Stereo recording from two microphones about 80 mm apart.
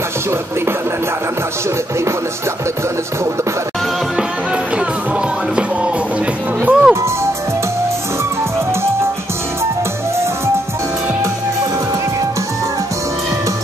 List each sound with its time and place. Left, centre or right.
6.6 s music: right